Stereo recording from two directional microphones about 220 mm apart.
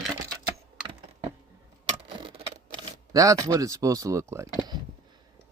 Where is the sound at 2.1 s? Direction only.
20° right (ahead or behind).